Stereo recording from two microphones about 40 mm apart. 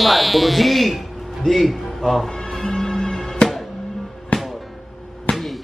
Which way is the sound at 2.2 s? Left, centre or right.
Centre.